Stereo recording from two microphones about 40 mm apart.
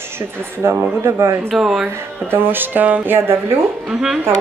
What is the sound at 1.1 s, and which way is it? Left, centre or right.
Speech, right.